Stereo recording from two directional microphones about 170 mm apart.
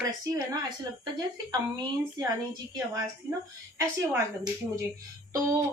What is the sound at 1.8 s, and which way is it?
A woman's voice, 20° right (ahead or behind).